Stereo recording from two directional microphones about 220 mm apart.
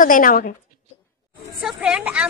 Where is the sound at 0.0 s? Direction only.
40° left (ahead or behind).